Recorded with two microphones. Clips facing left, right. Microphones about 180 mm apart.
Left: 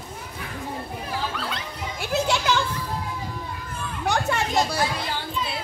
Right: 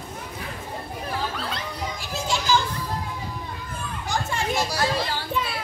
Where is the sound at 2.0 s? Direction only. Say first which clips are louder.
Left 7 dB; 65° left (ahead or behind).